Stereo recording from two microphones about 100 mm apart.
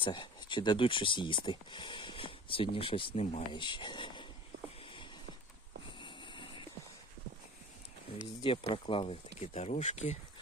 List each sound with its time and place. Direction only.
0.0 s speech: 50° left (ahead or behind); by 3.4 s 75° left (ahead or behind)
3.5 s speech: 50° left (ahead or behind)
4.8 s a sound: 60° left (ahead or behind)
8.4 s speech: 60° left (ahead or behind); by 10.2 s 90° left